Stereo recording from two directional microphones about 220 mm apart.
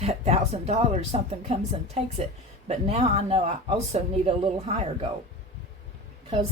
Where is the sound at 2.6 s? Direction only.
30° right (ahead or behind).